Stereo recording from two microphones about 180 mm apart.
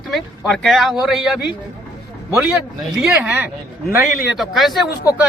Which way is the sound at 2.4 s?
5° right (ahead or behind).